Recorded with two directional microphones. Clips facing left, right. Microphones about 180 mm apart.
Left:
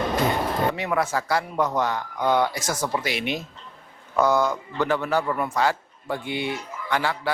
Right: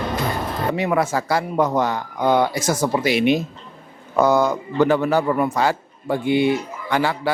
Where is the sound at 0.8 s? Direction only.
10° right (ahead or behind).